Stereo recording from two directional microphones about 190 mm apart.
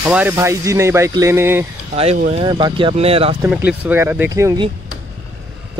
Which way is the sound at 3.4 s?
5° right (ahead or behind).